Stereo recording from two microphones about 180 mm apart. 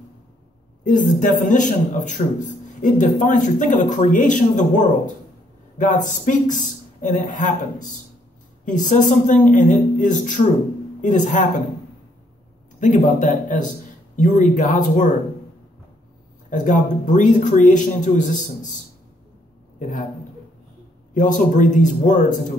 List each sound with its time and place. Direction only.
0.8 s speech: 45° left (ahead or behind)
12.8 s speech: 45° left (ahead or behind)
16.4 s speech: 45° left (ahead or behind)
21.1 s speech: 45° left (ahead or behind)